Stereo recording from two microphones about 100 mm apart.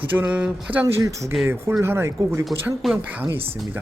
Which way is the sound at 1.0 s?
30° right (ahead or behind).